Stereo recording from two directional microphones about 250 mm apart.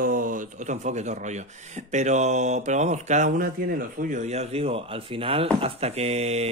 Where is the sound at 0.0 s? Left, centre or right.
Right.